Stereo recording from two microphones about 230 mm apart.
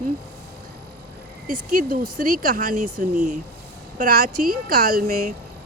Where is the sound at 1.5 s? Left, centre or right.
Right.